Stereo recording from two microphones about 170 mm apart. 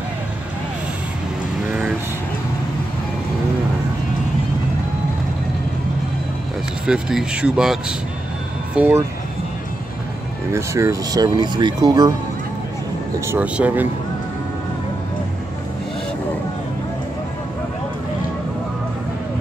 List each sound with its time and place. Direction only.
6.9 s speech: 5° right (ahead or behind)
10.5 s speech: 15° right (ahead or behind)
13.3 s speech: 10° right (ahead or behind)